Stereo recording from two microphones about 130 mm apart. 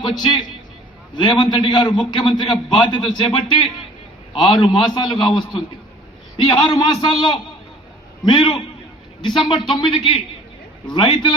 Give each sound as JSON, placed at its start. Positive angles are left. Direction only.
{"t": 0.2, "sound": "a man's voice", "side_deg": 35}